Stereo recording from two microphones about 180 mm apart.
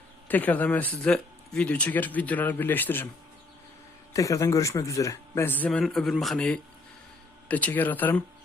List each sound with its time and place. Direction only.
0.3 s speech: 10° left (ahead or behind)
4.1 s speech: 15° left (ahead or behind)